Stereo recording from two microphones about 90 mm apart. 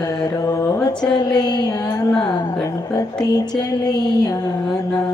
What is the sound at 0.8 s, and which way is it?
Speech, 50° left (ahead or behind).